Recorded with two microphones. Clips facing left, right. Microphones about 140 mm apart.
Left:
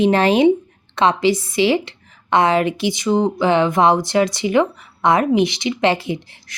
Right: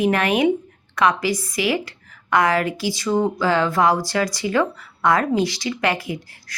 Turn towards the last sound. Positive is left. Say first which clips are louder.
# left 4 dB
turn(degrees=25)  # may be behind; listen again after turning